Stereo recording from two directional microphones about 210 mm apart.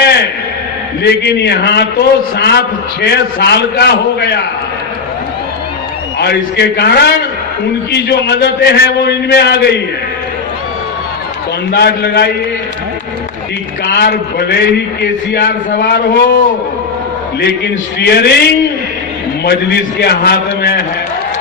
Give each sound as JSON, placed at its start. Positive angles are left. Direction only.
{"t": 0.0, "sound": "a sound", "side_deg": 50}
{"t": 1.0, "sound": "a man's voice", "side_deg": 50}
{"t": 6.1, "sound": "a man's voice", "side_deg": 50}
{"t": 11.7, "sound": "a man's voice", "side_deg": 50}
{"t": 13.8, "sound": "a man's voice", "side_deg": 50}
{"t": 18.0, "sound": "a man's voice", "side_deg": 50}